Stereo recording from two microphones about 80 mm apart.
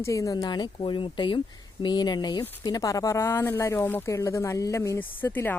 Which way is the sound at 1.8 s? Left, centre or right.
Left.